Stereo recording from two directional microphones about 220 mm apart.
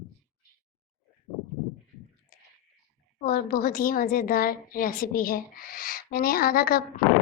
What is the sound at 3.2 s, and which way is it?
A woman's voice, 40° left (ahead or behind).